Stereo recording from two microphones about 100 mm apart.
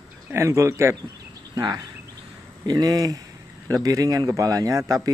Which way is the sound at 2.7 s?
40° right (ahead or behind).